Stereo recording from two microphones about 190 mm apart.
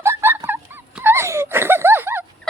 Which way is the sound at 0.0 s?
15° right (ahead or behind).